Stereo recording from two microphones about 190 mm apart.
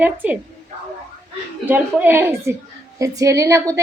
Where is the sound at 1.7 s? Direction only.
10° right (ahead or behind).